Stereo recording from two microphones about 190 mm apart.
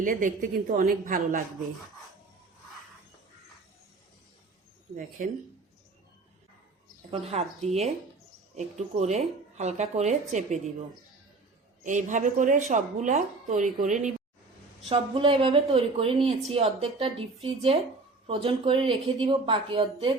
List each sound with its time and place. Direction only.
0.0 s a woman's voice: 45° right (ahead or behind)
4.9 s a woman's voice: 45° right (ahead or behind)
7.1 s speech: 35° right (ahead or behind)
11.8 s a woman's voice: 40° right (ahead or behind)
14.8 s speech: 30° right (ahead or behind)
18.3 s speech: 30° right (ahead or behind)